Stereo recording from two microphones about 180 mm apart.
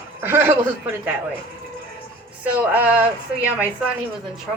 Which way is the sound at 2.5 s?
10° right (ahead or behind).